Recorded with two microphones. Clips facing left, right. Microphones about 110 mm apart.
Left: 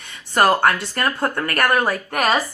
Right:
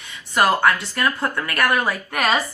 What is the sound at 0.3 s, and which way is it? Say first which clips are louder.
Speech: left 1 dB; 45° left (ahead or behind).